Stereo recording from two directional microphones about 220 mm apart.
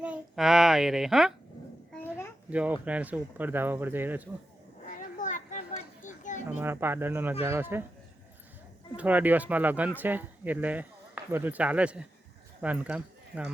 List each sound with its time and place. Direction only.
0.0 s speech: 5° right (ahead or behind)
2.5 s speech: 5° right (ahead or behind)
4.9 s children playing: 35° left (ahead or behind)
6.5 s speech: 10° right (ahead or behind)
9.0 s speech: 5° right (ahead or behind)